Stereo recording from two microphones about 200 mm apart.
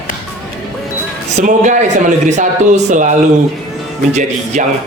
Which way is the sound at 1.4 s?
40° right (ahead or behind).